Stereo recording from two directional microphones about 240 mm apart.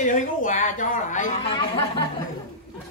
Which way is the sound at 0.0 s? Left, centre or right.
Left.